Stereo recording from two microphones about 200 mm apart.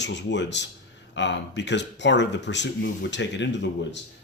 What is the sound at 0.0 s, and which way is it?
Speech, 60° left (ahead or behind).